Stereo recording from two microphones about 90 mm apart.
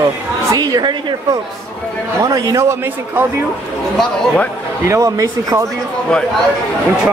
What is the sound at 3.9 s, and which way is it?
Speech, 10° left (ahead or behind).